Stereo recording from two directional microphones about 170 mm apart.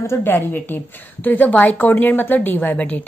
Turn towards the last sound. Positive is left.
turn(degrees=10)  # may be behind; listen again after turning